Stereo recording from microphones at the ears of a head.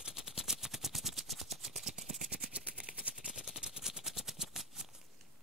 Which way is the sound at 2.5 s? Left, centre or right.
Centre.